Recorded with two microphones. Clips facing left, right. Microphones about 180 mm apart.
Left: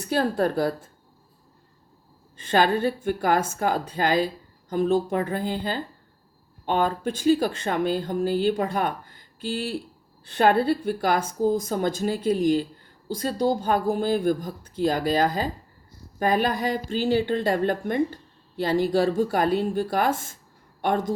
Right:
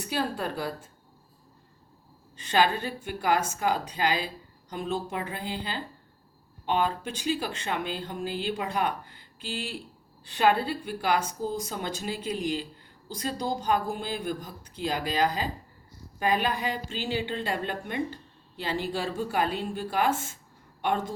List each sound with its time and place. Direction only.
0.1 s speech: 50° left (ahead or behind)
2.4 s a woman's voice: 50° left (ahead or behind)